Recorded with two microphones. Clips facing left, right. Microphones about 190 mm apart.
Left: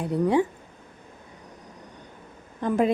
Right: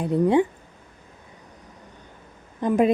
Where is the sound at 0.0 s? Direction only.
20° right (ahead or behind).